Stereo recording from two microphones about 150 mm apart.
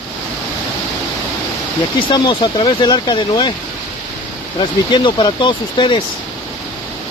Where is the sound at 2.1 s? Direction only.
30° left (ahead or behind).